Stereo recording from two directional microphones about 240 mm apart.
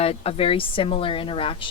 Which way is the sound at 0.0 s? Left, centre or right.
Left.